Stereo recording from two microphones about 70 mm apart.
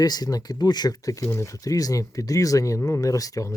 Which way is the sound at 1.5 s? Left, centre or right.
Left.